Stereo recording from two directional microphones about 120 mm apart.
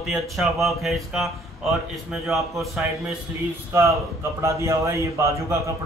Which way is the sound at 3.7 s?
25° right (ahead or behind).